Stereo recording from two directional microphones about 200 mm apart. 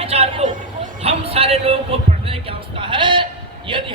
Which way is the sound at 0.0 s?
30° right (ahead or behind).